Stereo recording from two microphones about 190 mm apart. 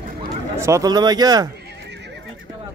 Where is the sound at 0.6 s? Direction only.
15° right (ahead or behind).